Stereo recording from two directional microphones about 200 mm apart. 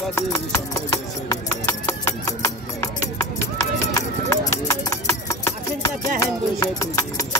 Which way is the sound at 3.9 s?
15° left (ahead or behind).